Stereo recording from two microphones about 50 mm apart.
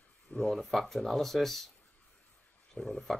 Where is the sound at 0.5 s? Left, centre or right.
Centre.